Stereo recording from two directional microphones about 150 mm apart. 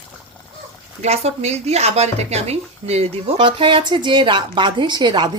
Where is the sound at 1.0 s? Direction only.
45° right (ahead or behind).